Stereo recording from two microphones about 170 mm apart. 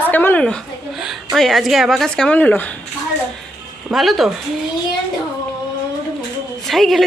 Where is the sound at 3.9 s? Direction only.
Centre (ahead or behind).